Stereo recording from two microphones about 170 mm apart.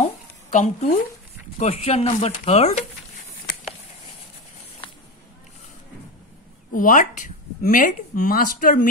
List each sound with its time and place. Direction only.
0.0 s a sound: 45° left (ahead or behind)
1.6 s speech: 40° left (ahead or behind)
6.7 s speech: 50° left (ahead or behind)